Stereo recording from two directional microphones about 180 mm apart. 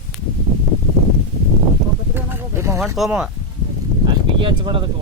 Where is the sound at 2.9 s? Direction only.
5° right (ahead or behind).